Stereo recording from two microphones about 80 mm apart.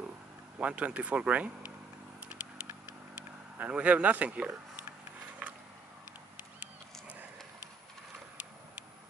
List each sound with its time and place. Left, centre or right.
0.6 s speech: centre
2.1 s vehicle: centre
3.5 s speech: centre